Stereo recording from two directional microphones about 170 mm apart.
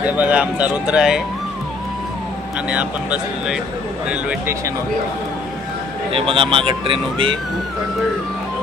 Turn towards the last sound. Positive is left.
turn(degrees=-30)  # may be behind; listen again after turning